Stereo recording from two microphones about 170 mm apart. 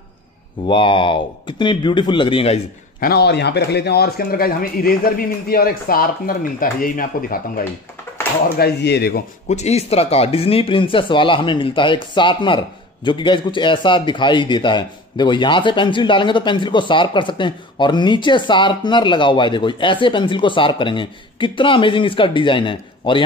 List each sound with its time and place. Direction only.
0.7 s speech: 30° left (ahead or behind)
3.0 s speech: 70° left (ahead or behind)
8.5 s speech: 75° left (ahead or behind)
9.5 s speech: 40° left (ahead or behind)